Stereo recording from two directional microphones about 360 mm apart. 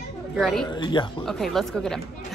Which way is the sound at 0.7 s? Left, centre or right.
Centre.